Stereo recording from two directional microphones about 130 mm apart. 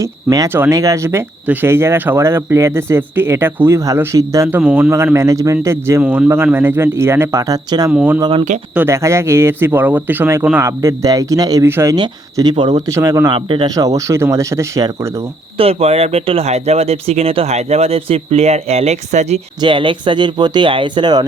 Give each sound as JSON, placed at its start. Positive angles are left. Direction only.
{"t": 0.0, "sound": "speech", "side_deg": -25}
{"t": 7.9, "sound": "speech", "side_deg": -10}
{"t": 8.9, "sound": "speech", "side_deg": -20}
{"t": 11.9, "sound": "speech", "side_deg": -30}
{"t": 12.9, "sound": "speech", "side_deg": -25}
{"t": 13.3, "sound": "speech", "side_deg": -40}
{"t": 15.5, "sound": "speech", "side_deg": -50}
{"t": 19.6, "sound": "speech", "side_deg": -40}